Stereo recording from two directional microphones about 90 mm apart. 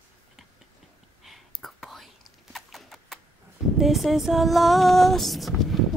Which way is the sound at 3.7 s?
Centre (ahead or behind).